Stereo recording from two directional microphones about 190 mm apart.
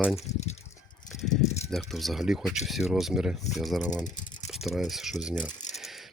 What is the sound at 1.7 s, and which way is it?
Speech, centre (ahead or behind).